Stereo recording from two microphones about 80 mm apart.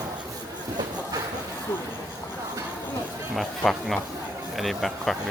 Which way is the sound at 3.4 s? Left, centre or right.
Centre.